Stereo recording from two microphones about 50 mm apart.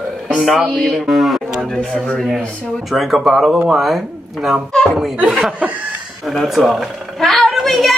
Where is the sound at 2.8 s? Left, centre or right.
Centre.